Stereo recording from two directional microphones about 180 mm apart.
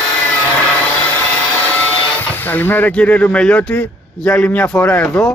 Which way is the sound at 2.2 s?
10° left (ahead or behind).